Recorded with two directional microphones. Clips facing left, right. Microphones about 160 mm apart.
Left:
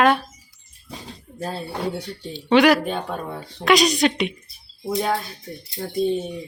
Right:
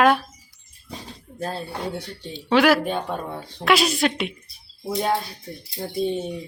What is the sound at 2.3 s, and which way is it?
Speech, centre (ahead or behind).